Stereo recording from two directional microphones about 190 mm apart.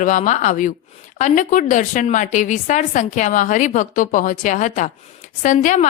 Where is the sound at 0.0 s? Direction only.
40° left (ahead or behind).